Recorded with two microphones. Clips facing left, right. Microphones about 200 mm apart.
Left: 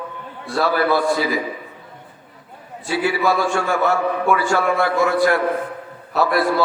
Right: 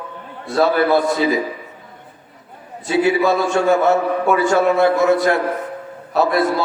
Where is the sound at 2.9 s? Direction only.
20° right (ahead or behind).